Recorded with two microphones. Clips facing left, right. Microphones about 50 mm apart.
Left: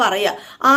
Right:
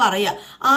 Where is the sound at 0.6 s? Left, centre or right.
Left.